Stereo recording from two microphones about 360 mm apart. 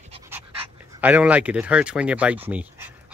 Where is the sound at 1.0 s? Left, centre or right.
Centre.